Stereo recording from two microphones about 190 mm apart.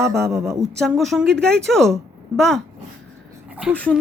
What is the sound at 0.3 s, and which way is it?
Speech, 15° right (ahead or behind).